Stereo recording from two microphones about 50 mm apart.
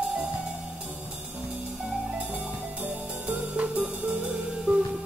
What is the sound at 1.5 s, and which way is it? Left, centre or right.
Music, right.